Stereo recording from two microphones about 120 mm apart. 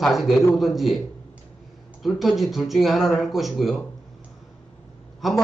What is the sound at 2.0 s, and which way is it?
A man's voice, centre (ahead or behind).